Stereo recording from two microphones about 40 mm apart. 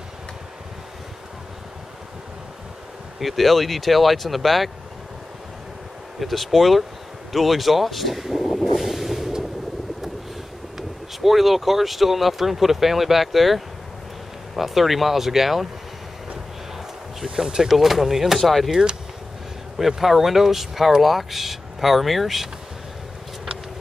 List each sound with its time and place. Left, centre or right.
3.2 s speech: centre
6.1 s speech: centre
7.3 s vehicle: centre
10.8 s speech: centre
17.5 s speech: centre
19.8 s speech: centre